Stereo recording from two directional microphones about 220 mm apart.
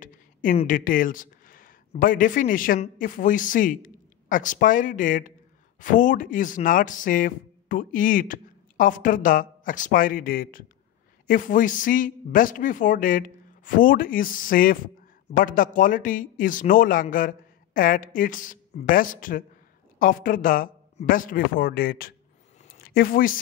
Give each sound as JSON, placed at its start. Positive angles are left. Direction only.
{"t": 0.0, "sound": "speech", "side_deg": 35}